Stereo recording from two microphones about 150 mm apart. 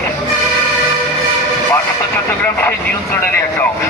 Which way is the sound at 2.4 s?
10° left (ahead or behind).